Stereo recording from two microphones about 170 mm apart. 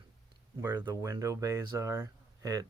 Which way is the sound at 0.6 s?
25° right (ahead or behind).